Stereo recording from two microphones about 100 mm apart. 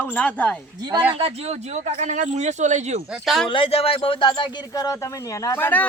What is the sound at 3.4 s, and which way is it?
Speech, 60° left (ahead or behind).